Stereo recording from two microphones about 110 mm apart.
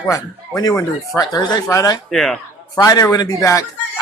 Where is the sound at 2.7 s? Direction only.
35° left (ahead or behind).